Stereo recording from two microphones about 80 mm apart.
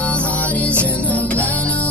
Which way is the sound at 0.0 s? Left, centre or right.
Centre.